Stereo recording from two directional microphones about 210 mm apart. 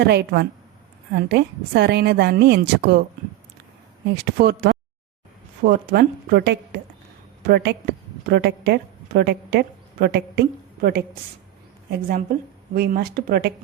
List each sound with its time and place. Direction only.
0.0 s a woman's voice: 55° right (ahead or behind)
4.1 s a woman's voice: 50° right (ahead or behind)